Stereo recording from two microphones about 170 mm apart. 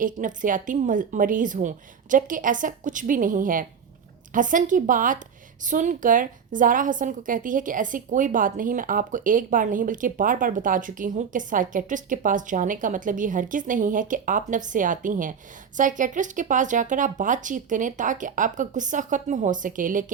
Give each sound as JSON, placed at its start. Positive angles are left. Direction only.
{"t": 0.0, "sound": "a woman's voice", "side_deg": -50}